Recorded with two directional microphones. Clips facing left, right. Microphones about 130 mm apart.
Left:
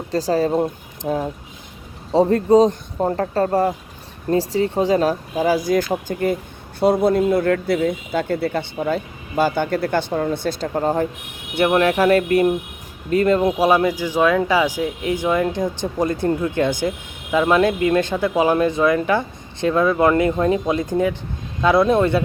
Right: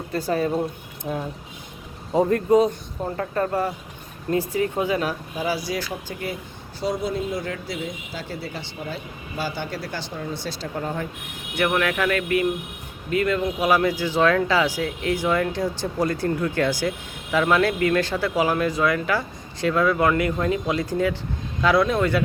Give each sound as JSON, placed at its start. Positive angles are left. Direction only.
{"t": 0.3, "sound": "speech", "side_deg": 35}
{"t": 3.0, "sound": "speech", "side_deg": 45}
{"t": 13.7, "sound": "speech", "side_deg": 20}